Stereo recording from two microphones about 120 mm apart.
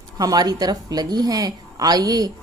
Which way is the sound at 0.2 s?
30° right (ahead or behind).